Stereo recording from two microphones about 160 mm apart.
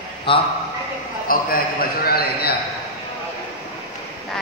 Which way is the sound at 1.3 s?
60° left (ahead or behind).